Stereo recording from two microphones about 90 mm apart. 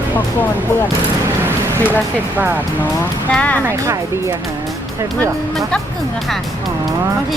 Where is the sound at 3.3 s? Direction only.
15° left (ahead or behind).